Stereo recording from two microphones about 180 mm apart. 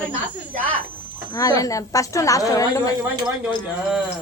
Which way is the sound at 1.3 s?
20° left (ahead or behind).